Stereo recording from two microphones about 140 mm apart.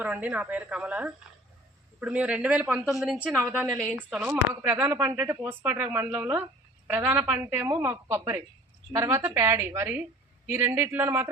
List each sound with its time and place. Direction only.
0.0 s a woman's voice: 10° right (ahead or behind)
3.9 s speech: 15° right (ahead or behind)